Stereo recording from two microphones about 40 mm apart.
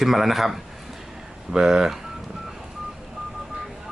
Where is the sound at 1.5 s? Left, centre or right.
Centre.